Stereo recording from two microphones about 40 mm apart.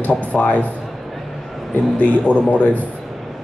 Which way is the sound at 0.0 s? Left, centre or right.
Left.